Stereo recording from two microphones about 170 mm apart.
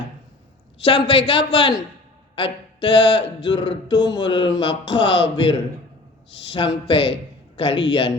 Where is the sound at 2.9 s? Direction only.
90° left.